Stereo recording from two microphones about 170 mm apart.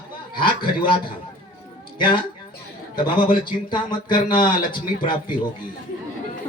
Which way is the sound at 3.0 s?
25° left (ahead or behind).